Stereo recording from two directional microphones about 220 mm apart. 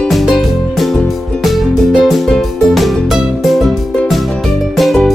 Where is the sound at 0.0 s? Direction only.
Centre (ahead or behind).